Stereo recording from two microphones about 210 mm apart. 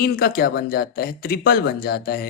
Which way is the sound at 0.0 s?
45° left (ahead or behind).